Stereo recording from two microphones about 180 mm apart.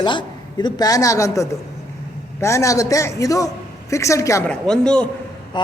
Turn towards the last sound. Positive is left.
turn(degrees=5)  # may be behind; listen again after turning